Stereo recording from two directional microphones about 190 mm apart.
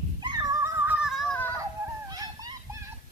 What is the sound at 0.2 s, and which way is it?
Neigh, 20° right (ahead or behind).